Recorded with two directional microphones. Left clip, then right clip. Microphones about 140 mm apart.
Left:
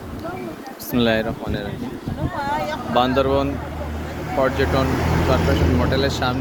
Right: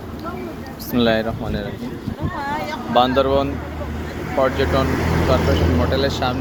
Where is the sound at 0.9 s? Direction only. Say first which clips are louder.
Right 1 dB; 20° left (ahead or behind).